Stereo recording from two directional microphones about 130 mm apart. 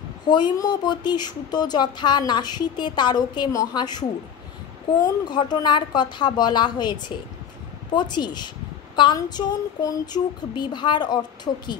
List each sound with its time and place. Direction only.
0.3 s speech: 35° left (ahead or behind)
5.0 s speech: 35° left (ahead or behind)